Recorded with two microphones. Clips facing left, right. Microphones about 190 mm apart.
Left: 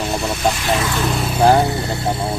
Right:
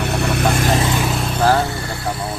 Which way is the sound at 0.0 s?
65° right (ahead or behind).